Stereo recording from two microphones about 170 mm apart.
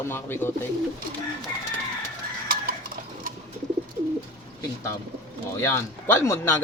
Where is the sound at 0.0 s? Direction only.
15° left (ahead or behind).